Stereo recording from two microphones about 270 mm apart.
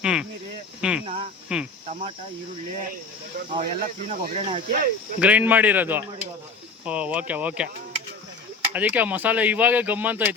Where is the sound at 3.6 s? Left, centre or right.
Right.